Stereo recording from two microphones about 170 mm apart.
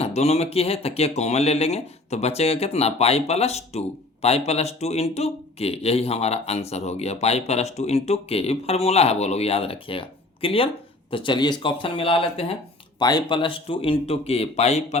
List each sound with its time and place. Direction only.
0.0 s speech: 40° left (ahead or behind)